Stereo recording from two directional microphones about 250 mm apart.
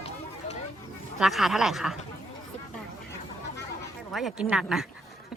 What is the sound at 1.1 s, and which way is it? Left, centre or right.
Speech, centre.